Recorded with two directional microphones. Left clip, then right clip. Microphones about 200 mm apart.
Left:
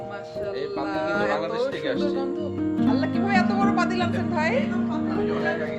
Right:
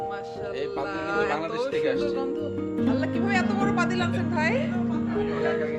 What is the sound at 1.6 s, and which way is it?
A woman's voice, 5° right (ahead or behind).